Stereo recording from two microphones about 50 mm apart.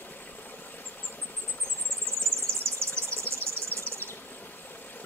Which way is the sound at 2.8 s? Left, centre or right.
Right.